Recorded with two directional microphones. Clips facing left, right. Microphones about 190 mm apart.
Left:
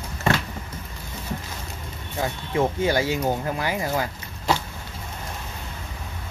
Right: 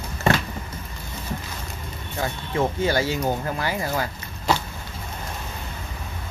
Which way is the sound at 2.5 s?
15° left (ahead or behind).